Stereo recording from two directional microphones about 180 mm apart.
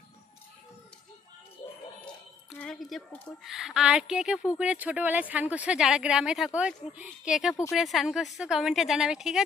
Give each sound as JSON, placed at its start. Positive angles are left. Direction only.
{"t": 2.0, "sound": "a woman's voice", "side_deg": 5}